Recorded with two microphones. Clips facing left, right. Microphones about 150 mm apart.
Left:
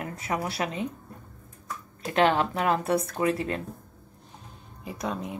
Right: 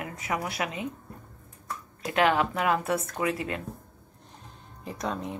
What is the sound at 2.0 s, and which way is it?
Speech, 30° left (ahead or behind).